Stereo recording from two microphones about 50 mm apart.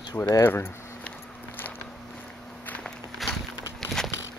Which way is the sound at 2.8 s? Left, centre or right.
Centre.